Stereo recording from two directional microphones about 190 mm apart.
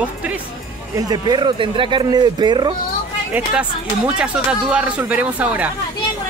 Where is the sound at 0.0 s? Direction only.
10° right (ahead or behind).